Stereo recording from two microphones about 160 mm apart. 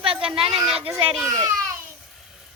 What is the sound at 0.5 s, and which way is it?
Speech, centre (ahead or behind).